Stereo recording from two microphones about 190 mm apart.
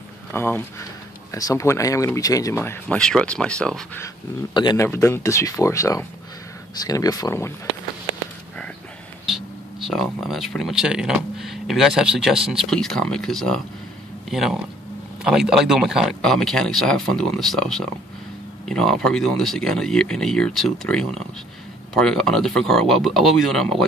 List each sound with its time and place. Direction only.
0.3 s speech: 10° left (ahead or behind)
4.6 s speech: 25° left (ahead or behind)
9.3 s speech: centre (ahead or behind)